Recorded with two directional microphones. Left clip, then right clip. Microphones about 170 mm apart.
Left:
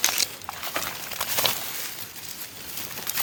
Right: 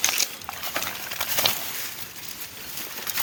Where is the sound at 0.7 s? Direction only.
Centre (ahead or behind).